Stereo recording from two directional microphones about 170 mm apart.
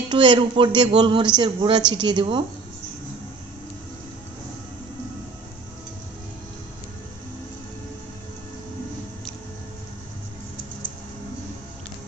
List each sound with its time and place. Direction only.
0.1 s speech: 25° right (ahead or behind)